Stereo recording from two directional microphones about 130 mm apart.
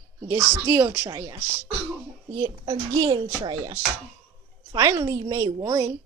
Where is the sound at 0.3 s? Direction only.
20° right (ahead or behind).